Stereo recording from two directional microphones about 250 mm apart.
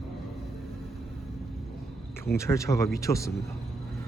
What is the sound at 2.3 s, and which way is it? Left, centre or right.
Speech, centre.